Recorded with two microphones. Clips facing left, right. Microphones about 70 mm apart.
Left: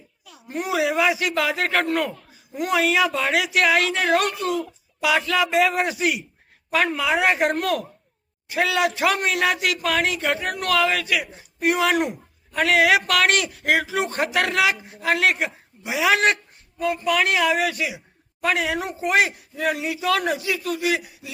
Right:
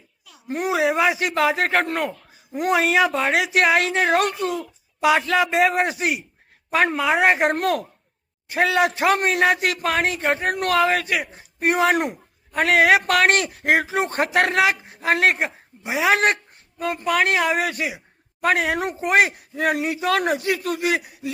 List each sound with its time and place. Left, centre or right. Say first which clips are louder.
0.5 s speech: right 2 dB; right
2.6 s a man's voice: right 2 dB; right